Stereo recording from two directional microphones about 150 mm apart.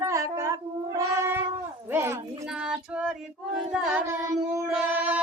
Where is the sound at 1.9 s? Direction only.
15° right (ahead or behind).